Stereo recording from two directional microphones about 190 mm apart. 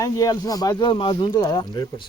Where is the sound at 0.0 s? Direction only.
20° left (ahead or behind).